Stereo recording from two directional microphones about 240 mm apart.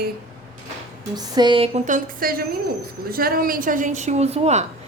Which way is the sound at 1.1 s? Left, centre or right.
Centre.